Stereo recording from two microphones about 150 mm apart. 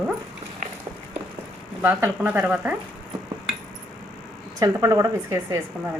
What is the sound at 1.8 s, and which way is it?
Speech, 15° right (ahead or behind).